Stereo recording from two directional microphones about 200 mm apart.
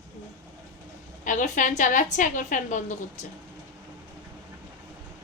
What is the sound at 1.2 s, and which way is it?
A woman's voice, 40° left (ahead or behind).